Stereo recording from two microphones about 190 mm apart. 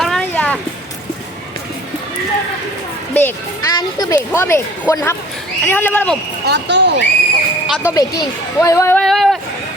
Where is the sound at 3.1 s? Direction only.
10° left (ahead or behind).